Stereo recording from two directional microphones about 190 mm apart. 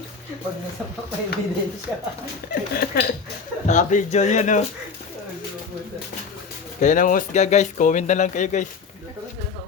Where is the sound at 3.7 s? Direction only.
40° left (ahead or behind).